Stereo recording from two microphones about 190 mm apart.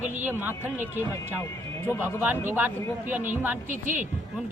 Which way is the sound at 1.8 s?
15° left (ahead or behind).